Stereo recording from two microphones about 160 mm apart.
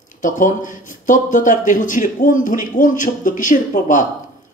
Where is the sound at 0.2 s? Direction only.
55° left (ahead or behind).